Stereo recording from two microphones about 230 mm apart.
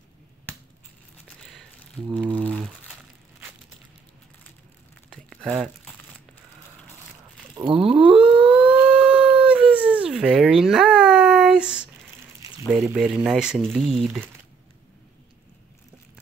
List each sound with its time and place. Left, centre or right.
2.0 s music: centre
2.4 s crumpling: centre
5.1 s a sound: centre
7.5 s a sound: right
8.5 s dog: centre
12.9 s speech: centre